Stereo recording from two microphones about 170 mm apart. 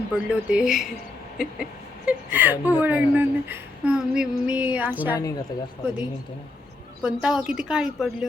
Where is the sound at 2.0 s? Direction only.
10° right (ahead or behind).